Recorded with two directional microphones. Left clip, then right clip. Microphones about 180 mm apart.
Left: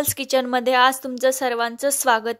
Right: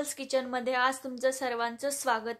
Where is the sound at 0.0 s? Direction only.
50° left (ahead or behind).